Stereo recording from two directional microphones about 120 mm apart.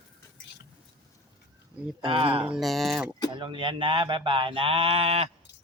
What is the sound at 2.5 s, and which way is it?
Speech, centre (ahead or behind).